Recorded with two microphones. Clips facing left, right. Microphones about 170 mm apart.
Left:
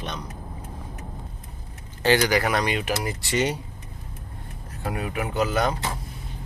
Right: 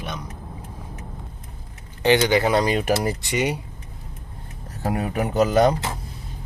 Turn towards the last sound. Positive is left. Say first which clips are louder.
# right 6 dB
turn(degrees=-40)  # may be behind; listen again after turning